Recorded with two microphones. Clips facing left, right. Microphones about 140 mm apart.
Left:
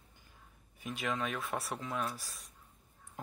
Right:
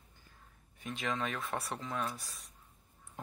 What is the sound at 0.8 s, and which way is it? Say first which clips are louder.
Speech: even; 5° left (ahead or behind).